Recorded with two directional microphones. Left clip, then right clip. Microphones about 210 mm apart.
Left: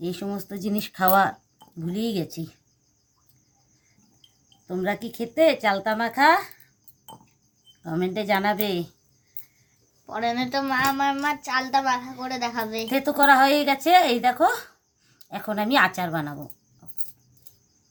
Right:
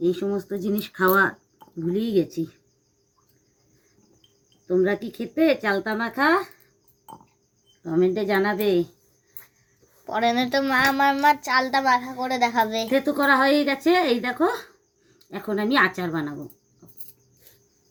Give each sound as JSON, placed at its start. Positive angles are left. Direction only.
{"t": 0.0, "sound": "speech", "side_deg": 55}
{"t": 4.6, "sound": "speech", "side_deg": 55}
{"t": 7.9, "sound": "speech", "side_deg": 55}
{"t": 10.1, "sound": "a child's voice", "side_deg": -20}
{"t": 12.9, "sound": "speech", "side_deg": 55}